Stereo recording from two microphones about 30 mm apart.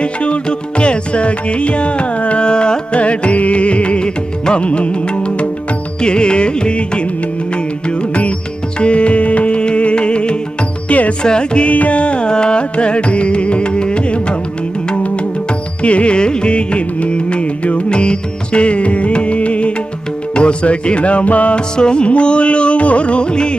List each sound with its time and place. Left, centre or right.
0.0 s music: left
2.5 s music: left
2.9 s music: left
6.0 s music: left
9.6 s music: left
10.8 s music: left
11.2 s music: left
11.6 s music: left
12.3 s music: left
15.8 s music: left
16.1 s music: left
21.8 s music: left